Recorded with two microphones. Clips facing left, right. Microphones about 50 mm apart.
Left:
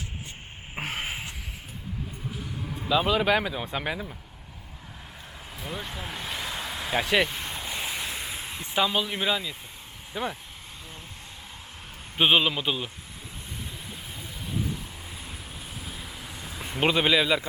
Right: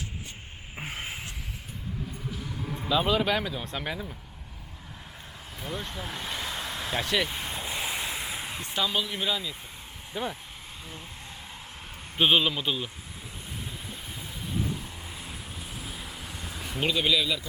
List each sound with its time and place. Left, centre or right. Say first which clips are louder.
0.8 s a sound: left 4 dB; left
2.6 s speech: left 1 dB; centre
5.6 s speech: even; centre
7.3 s waves: even; centre
8.6 s speech: left 4 dB; centre
12.1 s speech: left 1 dB; centre
15.2 s vehicle: even; centre
16.8 s a man's voice: left 4 dB; left